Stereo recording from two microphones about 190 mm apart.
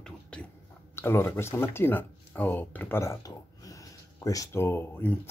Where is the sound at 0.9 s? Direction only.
10° left (ahead or behind).